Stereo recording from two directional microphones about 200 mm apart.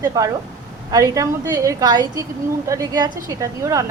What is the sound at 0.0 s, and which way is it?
Speech, 15° right (ahead or behind).